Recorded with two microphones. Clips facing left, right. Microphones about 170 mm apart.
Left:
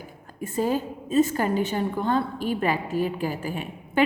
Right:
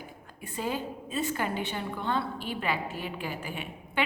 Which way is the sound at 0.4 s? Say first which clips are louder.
Left 8 dB; 45° left (ahead or behind).